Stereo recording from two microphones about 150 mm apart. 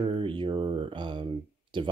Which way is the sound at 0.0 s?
35° right (ahead or behind).